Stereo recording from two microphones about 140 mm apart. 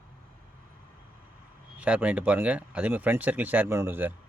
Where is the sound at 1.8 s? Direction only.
10° right (ahead or behind).